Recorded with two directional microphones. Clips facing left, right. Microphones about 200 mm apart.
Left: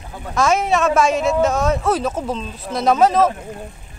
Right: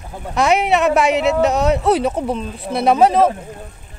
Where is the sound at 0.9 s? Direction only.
65° right (ahead or behind).